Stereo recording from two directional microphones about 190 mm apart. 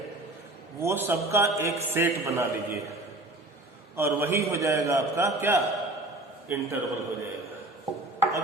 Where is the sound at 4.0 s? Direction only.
15° right (ahead or behind).